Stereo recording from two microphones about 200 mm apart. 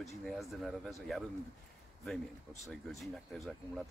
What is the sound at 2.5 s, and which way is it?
Speech, centre (ahead or behind).